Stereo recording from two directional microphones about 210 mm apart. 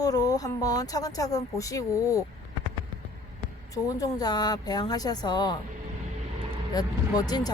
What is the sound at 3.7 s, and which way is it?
Speech, 15° left (ahead or behind).